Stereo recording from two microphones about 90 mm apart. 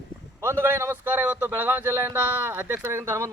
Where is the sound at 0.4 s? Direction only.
25° right (ahead or behind).